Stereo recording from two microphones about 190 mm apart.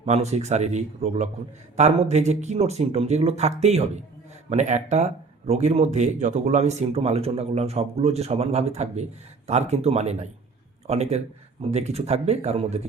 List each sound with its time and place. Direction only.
0.0 s speech: 35° right (ahead or behind)